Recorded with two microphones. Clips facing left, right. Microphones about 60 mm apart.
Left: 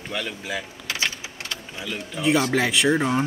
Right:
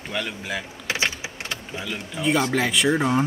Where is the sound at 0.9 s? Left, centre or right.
Right.